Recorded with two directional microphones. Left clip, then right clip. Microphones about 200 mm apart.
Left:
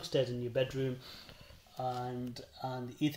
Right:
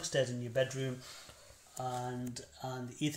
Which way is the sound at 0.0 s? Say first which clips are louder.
Left 1 dB; 45° left (ahead or behind).